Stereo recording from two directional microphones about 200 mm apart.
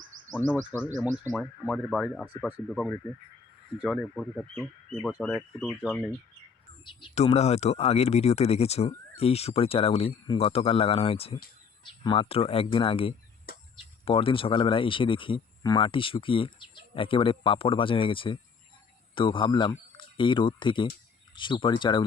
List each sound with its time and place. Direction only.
0.7 s speech: 10° right (ahead or behind)
1.2 s speech: 5° left (ahead or behind)
7.0 s speech: 30° left (ahead or behind)